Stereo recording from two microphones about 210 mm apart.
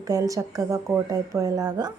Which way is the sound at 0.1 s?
15° right (ahead or behind).